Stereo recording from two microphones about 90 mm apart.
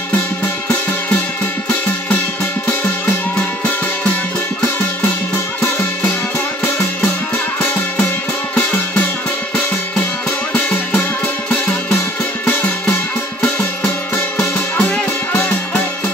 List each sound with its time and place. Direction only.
14.3 s music: 15° left (ahead or behind)